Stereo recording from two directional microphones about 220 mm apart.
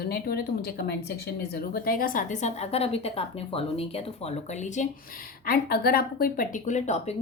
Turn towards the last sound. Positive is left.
turn(degrees=30)  # may be behind; listen again after turning